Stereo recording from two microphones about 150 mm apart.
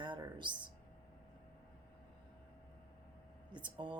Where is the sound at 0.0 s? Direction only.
30° right (ahead or behind).